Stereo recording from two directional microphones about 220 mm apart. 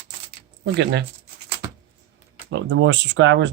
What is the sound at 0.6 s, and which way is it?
Speech, 50° right (ahead or behind).